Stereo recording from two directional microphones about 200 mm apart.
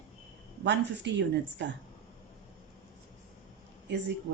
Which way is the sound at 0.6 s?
60° right (ahead or behind).